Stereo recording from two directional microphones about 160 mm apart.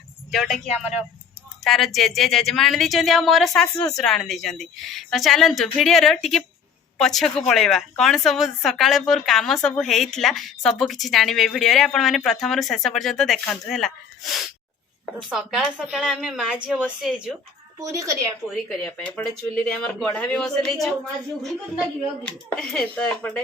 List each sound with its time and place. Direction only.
0.3 s a woman's voice: centre (ahead or behind)
17.7 s a woman's voice: 20° right (ahead or behind)
18.4 s a woman's voice: centre (ahead or behind)